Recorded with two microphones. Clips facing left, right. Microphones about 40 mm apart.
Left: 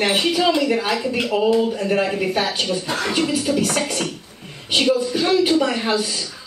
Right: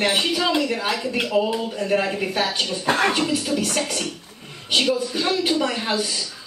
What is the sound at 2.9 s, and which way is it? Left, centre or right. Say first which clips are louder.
Music: right 4 dB; right.